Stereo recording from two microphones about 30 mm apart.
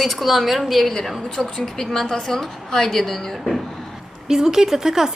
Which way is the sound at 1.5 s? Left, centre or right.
Centre.